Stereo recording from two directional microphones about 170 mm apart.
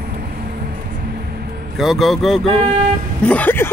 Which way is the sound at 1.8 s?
Centre (ahead or behind).